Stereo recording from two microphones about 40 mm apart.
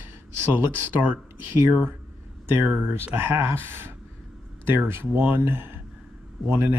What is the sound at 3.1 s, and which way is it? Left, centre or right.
Speech, right.